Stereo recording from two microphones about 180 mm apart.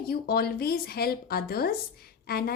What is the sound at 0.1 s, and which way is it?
Speech, 55° left (ahead or behind).